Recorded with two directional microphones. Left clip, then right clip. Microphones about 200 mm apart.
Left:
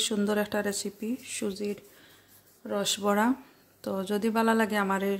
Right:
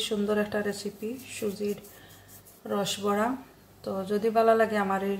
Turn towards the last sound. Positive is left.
turn(degrees=50)  # may be behind; listen again after turning